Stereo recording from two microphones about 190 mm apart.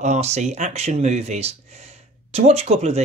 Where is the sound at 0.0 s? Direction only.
35° right (ahead or behind).